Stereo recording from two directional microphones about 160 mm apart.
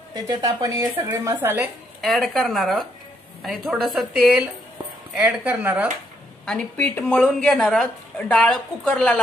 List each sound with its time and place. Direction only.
0.1 s a woman's voice: 25° right (ahead or behind)
2.0 s a woman's voice: centre (ahead or behind)
6.4 s a woman's voice: 5° left (ahead or behind)